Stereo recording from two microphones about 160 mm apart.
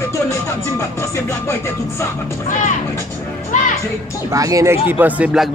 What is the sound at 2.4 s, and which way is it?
Speech, 50° left (ahead or behind).